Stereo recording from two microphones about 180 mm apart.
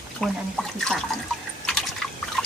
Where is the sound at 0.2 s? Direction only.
5° left (ahead or behind).